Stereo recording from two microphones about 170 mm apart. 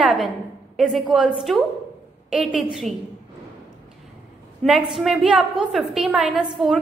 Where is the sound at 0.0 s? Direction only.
Centre (ahead or behind).